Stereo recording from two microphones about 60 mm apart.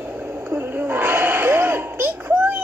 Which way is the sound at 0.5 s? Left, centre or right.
Right.